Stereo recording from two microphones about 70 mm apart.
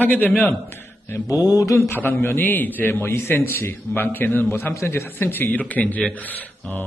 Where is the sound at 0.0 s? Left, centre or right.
Left.